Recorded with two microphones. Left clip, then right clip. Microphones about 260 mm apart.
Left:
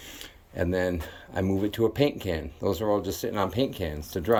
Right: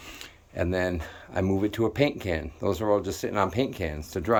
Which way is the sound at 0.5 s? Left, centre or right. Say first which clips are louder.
Even; centre.